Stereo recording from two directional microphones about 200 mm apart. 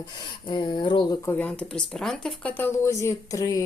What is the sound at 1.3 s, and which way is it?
Speech, 5° left (ahead or behind).